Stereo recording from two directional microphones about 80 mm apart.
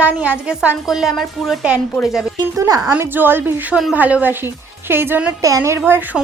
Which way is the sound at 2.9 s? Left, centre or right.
Right.